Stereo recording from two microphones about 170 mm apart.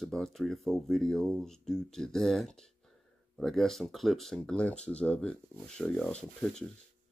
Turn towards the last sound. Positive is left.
turn(degrees=5)  # may be behind; listen again after turning